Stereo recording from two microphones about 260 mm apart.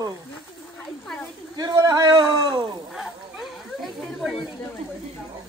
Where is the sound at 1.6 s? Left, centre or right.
Centre.